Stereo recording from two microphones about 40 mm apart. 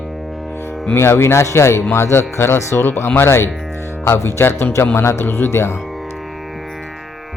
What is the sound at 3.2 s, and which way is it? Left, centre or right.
Speech, left.